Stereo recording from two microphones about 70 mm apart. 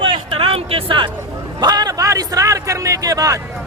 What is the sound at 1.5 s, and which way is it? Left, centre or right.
A man's voice, right.